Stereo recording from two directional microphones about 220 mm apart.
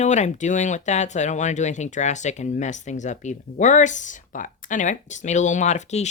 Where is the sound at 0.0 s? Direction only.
30° left (ahead or behind).